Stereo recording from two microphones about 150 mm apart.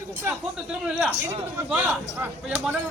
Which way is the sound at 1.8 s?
10° right (ahead or behind).